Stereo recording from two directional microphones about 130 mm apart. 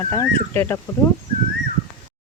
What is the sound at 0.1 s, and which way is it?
Speech, 20° left (ahead or behind).